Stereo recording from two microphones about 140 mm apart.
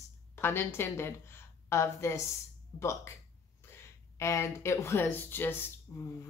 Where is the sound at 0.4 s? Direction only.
15° left (ahead or behind).